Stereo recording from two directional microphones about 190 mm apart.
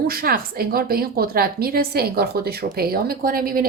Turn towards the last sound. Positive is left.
turn(degrees=-50)  # may be behind; listen again after turning